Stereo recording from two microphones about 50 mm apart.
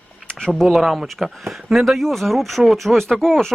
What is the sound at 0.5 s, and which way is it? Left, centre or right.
Speech, centre.